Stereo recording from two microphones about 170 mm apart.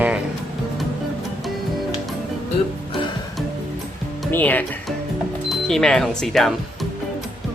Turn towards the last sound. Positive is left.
turn(degrees=0)  # may be behind; listen again after turning